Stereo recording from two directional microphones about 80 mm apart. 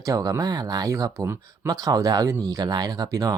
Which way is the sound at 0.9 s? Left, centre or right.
Right.